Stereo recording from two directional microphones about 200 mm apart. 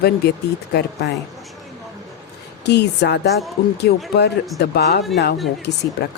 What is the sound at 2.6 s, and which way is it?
A woman's voice, 55° left (ahead or behind).